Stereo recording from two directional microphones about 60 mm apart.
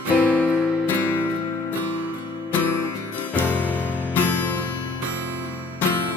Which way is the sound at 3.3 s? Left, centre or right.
Left.